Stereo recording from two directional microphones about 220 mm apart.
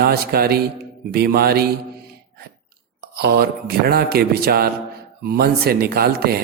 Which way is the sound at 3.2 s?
45° right (ahead or behind).